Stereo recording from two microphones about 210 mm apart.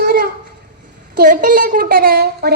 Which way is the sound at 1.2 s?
40° right (ahead or behind).